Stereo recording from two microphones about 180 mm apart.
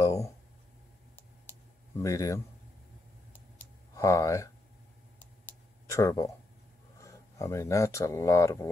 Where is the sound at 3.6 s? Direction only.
15° left (ahead or behind).